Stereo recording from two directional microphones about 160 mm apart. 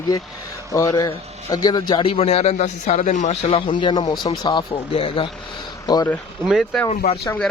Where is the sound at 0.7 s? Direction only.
20° left (ahead or behind); by 3.3 s 50° left (ahead or behind).